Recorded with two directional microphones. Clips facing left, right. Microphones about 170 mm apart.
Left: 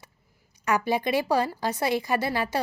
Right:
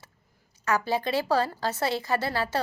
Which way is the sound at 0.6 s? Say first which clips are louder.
Left 2 dB; 15° left (ahead or behind).